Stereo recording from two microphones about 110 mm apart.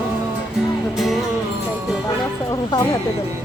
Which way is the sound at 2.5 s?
35° left (ahead or behind).